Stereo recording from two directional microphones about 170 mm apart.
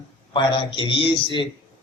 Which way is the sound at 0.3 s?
30° left (ahead or behind).